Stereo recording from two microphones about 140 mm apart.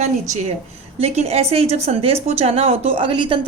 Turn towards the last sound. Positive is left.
turn(degrees=-35)  # may be behind; listen again after turning